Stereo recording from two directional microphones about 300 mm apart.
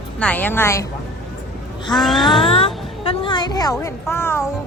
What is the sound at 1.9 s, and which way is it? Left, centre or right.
Speech, centre.